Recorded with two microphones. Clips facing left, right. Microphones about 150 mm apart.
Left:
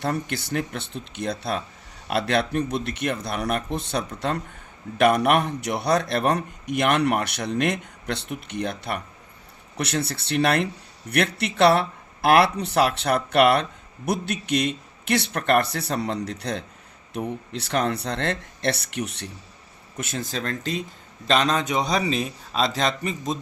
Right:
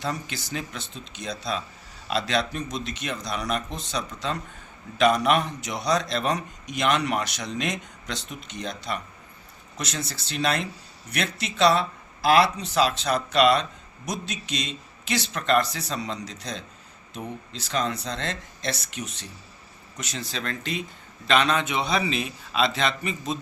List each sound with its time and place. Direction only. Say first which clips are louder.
0.0 s speech: left 5 dB; 60° left (ahead or behind)
20.0 s a man's voice: left 4 dB; 50° left (ahead or behind)